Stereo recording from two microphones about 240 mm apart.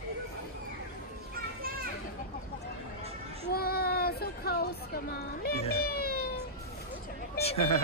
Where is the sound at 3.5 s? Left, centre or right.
Left.